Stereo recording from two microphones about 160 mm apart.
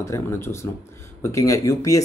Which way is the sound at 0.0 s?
15° left (ahead or behind).